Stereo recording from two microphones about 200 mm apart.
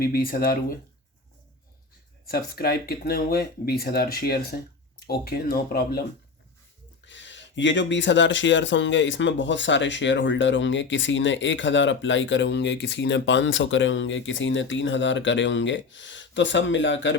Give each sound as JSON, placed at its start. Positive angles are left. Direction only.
{"t": 0.0, "sound": "speech", "side_deg": 45}
{"t": 2.2, "sound": "speech", "side_deg": 50}
{"t": 7.0, "sound": "speech", "side_deg": 65}